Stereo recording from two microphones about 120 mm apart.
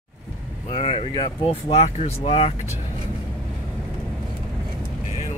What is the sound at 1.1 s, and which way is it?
Speech, 45° left (ahead or behind).